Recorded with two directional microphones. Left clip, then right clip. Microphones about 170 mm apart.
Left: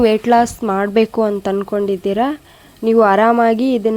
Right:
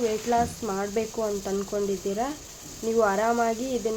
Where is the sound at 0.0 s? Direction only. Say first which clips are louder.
Left 12 dB; 70° left (ahead or behind).